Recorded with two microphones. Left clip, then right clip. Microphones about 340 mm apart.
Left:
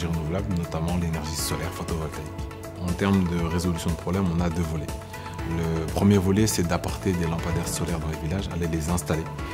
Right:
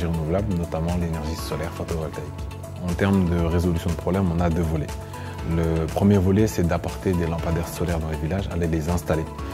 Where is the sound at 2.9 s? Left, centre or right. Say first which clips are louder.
Right 3 dB; right.